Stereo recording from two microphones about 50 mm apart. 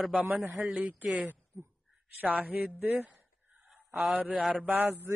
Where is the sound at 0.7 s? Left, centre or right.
Right.